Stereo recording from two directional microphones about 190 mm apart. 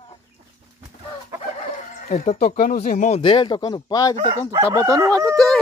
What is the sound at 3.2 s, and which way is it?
Speech, 25° left (ahead or behind).